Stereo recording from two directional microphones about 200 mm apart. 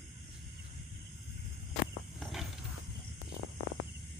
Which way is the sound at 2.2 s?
Centre (ahead or behind).